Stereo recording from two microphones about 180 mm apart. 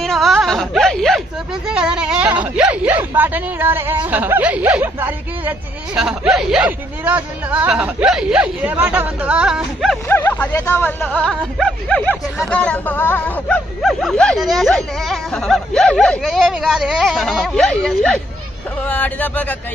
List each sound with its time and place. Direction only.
0.0 s wail: centre (ahead or behind)
1.7 s speech: 5° right (ahead or behind)
10.0 s speech: 10° left (ahead or behind)